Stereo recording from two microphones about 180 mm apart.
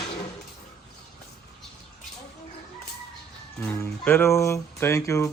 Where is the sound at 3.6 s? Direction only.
10° left (ahead or behind).